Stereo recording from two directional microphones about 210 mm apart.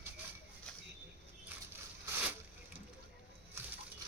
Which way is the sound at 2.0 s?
10° right (ahead or behind).